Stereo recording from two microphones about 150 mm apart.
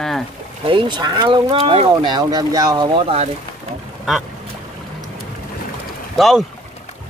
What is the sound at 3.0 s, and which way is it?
Speech, 40° right (ahead or behind).